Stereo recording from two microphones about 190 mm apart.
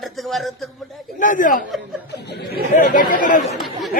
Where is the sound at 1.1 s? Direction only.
45° left (ahead or behind).